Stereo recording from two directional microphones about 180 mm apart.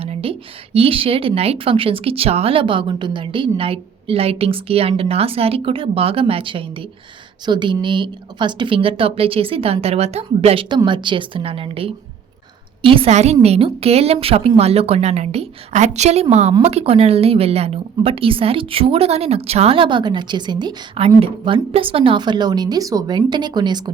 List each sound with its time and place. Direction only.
0.0 s a woman's voice: 35° right (ahead or behind)